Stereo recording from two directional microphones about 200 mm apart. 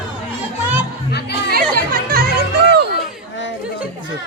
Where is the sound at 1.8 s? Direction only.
50° right (ahead or behind).